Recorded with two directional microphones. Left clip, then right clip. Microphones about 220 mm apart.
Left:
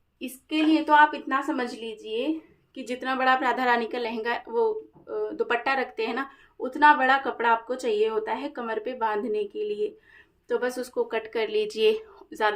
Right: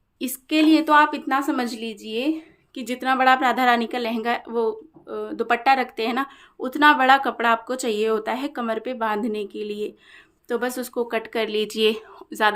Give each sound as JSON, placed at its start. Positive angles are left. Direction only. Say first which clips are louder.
{"t": 0.2, "sound": "a woman's voice", "louder": "right 6 dB", "side_deg": -45}